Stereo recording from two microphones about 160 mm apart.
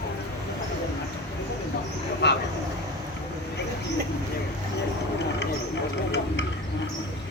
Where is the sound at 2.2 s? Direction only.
90° left.